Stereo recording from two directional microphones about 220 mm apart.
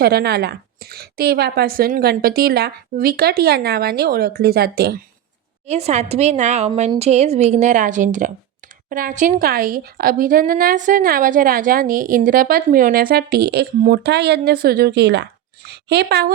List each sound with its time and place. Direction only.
0.0 s a woman's voice: 45° right (ahead or behind)
5.6 s a woman's voice: 30° right (ahead or behind); by 16.3 s 45° right (ahead or behind)